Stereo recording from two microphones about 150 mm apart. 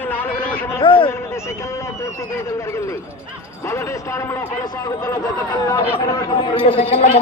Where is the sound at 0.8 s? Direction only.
35° left (ahead or behind).